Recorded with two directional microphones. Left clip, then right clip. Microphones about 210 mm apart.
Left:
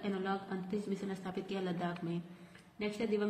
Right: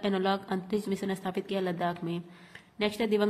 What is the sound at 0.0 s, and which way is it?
A woman's voice, 40° right (ahead or behind).